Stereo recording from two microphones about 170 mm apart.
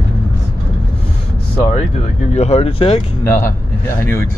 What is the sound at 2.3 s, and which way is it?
Speech, 40° left (ahead or behind).